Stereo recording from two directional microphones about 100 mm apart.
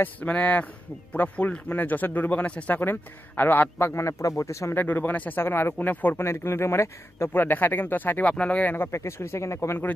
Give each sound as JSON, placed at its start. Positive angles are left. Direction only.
{"t": 0.0, "sound": "a man's voice", "side_deg": 15}
{"t": 4.8, "sound": "speech", "side_deg": 20}